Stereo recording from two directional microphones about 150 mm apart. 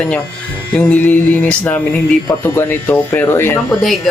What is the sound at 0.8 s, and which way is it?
Music, 10° left (ahead or behind).